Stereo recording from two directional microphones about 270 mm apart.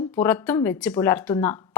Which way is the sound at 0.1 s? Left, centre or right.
Centre.